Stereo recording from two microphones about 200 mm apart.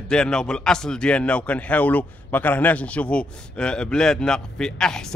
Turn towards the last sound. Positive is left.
turn(degrees=5)  # may be behind; listen again after turning